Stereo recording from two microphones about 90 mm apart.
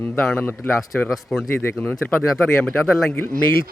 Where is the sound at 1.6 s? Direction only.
20° left (ahead or behind).